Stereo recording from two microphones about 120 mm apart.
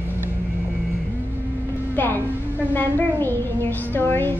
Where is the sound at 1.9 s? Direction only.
15° left (ahead or behind).